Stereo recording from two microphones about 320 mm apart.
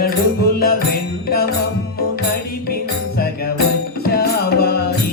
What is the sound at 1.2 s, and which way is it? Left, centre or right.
Music, left.